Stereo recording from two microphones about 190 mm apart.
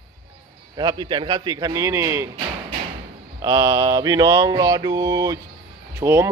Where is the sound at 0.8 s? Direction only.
20° right (ahead or behind).